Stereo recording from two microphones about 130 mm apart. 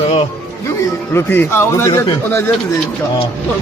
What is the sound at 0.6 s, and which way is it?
Speech, 15° left (ahead or behind).